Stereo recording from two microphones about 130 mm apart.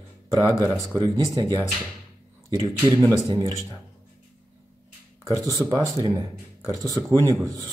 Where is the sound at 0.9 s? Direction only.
25° right (ahead or behind).